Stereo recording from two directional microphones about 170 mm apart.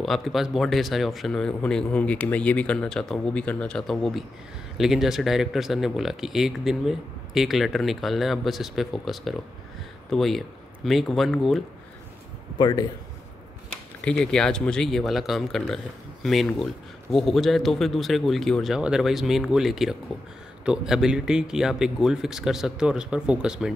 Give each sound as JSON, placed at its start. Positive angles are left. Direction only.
{"t": 0.0, "sound": "speech", "side_deg": 0}
{"t": 12.5, "sound": "speech", "side_deg": 25}
{"t": 13.7, "sound": "speech", "side_deg": 5}